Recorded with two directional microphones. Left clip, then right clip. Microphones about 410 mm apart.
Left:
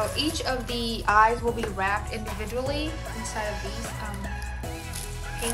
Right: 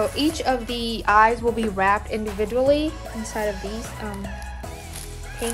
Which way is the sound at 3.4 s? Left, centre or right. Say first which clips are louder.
Right 6 dB; centre.